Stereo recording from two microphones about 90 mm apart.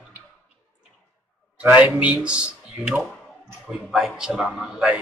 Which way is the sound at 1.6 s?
15° right (ahead or behind).